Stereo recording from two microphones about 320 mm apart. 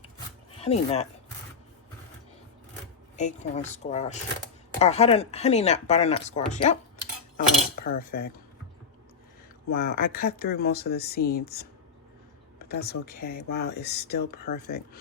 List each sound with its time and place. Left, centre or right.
0.5 s speech: centre
3.2 s speech: left
7.9 s speech: left
9.7 s speech: left
12.6 s speech: left